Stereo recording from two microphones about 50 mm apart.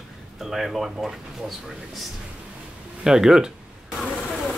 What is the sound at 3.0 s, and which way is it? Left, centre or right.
Speech, centre.